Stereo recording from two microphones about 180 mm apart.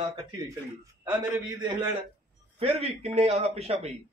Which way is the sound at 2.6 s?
35° right (ahead or behind).